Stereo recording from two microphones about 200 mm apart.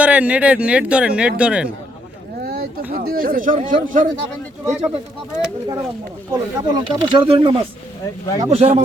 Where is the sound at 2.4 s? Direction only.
50° right (ahead or behind).